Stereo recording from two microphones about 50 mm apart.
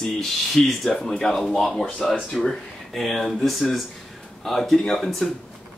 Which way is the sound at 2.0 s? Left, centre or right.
Left.